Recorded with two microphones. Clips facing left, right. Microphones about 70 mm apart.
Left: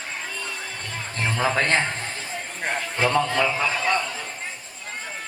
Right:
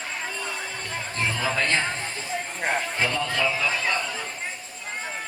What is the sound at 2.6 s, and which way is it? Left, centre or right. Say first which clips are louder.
Speech: right 1 dB; centre.